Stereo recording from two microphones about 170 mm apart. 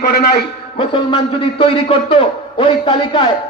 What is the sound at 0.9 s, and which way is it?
A man's voice, 30° left (ahead or behind).